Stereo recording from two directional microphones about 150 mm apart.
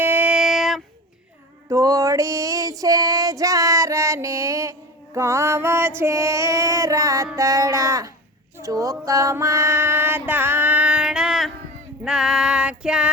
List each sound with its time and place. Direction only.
0.0 s female singing: 10° right (ahead or behind)
1.7 s female singing: 25° right (ahead or behind)
5.1 s music: 20° right (ahead or behind)
6.0 s child singing: 20° right (ahead or behind)
7.3 s a sound: 20° right (ahead or behind)
8.6 s music: 20° right (ahead or behind); by 11.5 s centre (ahead or behind)
12.0 s female singing: 5° right (ahead or behind)